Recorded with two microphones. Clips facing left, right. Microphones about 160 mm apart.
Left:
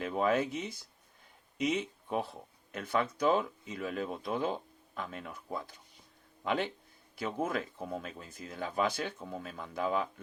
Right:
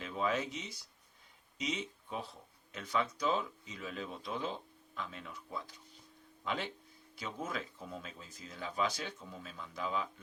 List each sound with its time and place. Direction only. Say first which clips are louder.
0.0 s speech: left 6 dB; 50° left (ahead or behind)